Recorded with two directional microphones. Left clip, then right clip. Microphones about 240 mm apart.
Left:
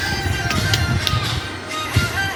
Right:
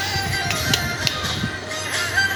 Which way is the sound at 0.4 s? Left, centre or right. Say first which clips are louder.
Left 1 dB; centre.